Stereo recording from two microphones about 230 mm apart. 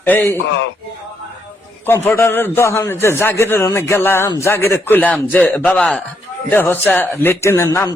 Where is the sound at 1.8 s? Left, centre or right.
Centre.